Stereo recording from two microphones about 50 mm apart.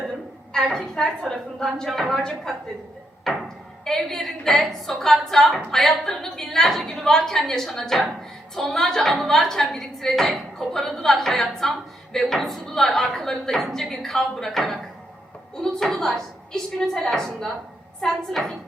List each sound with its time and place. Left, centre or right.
0.5 s a woman's voice: centre
3.3 s a sound: centre
3.8 s a woman's voice: centre